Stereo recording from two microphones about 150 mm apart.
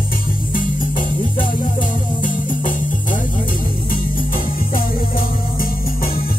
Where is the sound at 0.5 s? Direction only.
65° left (ahead or behind).